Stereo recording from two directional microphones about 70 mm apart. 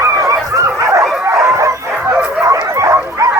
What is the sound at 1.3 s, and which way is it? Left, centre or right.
Bow-wow, right.